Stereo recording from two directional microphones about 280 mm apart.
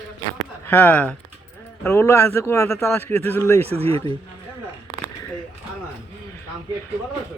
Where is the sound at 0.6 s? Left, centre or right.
Centre.